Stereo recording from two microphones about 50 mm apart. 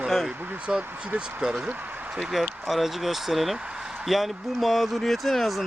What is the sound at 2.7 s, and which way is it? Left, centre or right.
Speech, centre.